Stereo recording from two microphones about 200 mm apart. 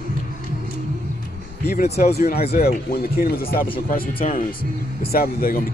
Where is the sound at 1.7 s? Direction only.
30° left (ahead or behind).